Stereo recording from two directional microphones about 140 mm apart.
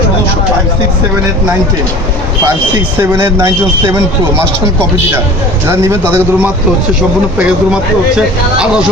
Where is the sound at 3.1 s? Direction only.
15° right (ahead or behind).